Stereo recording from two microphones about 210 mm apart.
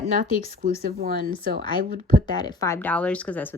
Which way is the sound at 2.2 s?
20° left (ahead or behind).